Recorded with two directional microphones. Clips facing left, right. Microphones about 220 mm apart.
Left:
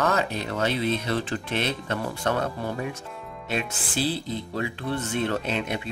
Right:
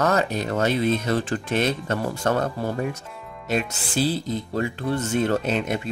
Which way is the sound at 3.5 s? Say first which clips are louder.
Right 4 dB; 45° right (ahead or behind).